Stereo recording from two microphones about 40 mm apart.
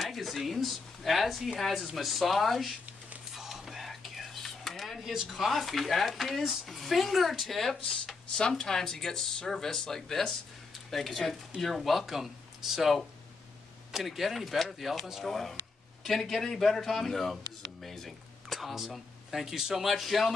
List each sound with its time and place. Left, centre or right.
0.0 s speech: centre
3.3 s whispering: centre
5.0 s speech: centre
5.4 s speech: centre
7.7 s speech: left; by 18.9 s centre
19.3 s speech: centre